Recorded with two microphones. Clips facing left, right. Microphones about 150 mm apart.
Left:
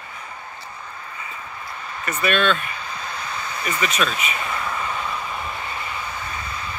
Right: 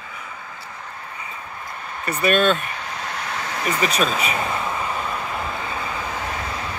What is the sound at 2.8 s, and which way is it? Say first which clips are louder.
Vehicle: right 2 dB; 75° right (ahead or behind).